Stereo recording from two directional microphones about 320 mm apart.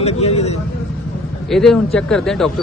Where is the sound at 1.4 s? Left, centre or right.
Centre.